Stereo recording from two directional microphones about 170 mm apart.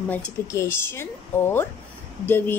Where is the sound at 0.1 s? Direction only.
15° left (ahead or behind).